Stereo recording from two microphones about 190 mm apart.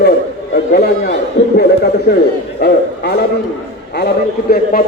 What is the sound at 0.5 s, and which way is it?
A man's voice, 60° left (ahead or behind).